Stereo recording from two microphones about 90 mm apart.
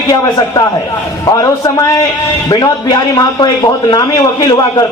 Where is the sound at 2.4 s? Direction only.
50° left (ahead or behind).